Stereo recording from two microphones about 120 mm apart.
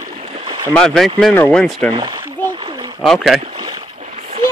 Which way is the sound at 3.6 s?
40° right (ahead or behind).